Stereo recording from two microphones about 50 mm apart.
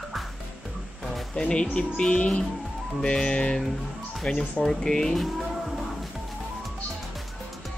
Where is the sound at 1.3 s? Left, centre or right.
Centre.